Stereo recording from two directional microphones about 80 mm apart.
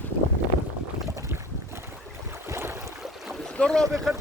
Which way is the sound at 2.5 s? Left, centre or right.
Right.